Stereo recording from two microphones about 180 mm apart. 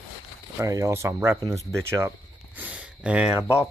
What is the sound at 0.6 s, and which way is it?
Speech, 15° right (ahead or behind).